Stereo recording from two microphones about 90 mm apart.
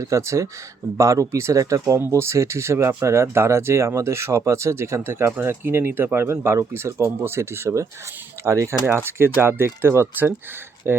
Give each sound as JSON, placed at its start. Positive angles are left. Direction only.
{"t": 0.0, "sound": "speech", "side_deg": -35}
{"t": 1.8, "sound": "speech", "side_deg": -25}